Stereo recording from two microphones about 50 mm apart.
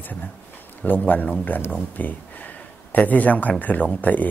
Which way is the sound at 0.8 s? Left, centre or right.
Left.